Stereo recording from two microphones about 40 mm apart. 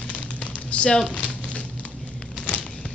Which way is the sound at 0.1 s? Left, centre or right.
Left.